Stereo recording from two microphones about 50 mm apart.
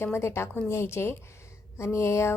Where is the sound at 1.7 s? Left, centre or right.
Left.